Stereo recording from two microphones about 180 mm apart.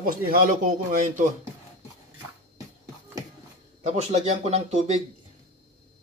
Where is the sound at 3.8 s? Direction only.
35° right (ahead or behind).